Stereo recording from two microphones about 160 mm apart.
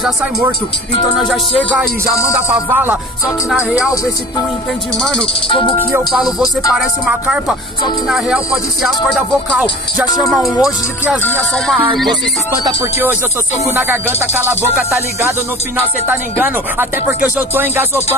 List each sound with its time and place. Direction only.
2.7 s speech: 10° right (ahead or behind)
3.9 s music: 20° left (ahead or behind)
5.9 s speech: 5° right (ahead or behind)
11.2 s music: 5° left (ahead or behind)
12.6 s speech: 15° right (ahead or behind)
16.1 s speech: 10° right (ahead or behind)